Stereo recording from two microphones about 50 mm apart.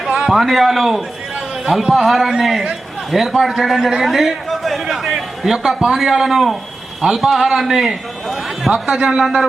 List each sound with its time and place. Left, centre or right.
0.3 s a man's voice: centre
8.9 s speech: right
9.1 s a man's voice: centre